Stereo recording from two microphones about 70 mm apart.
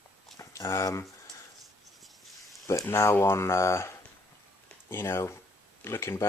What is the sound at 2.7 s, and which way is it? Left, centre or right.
Speech, left.